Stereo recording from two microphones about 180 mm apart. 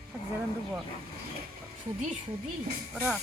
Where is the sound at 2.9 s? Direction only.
Centre (ahead or behind).